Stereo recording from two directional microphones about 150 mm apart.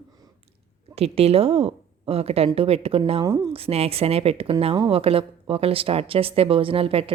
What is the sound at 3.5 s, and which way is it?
A woman's voice, 40° right (ahead or behind).